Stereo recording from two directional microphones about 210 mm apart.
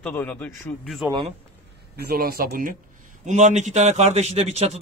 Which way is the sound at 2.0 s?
45° right (ahead or behind).